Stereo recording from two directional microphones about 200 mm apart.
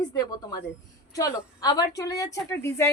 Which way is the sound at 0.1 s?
20° left (ahead or behind).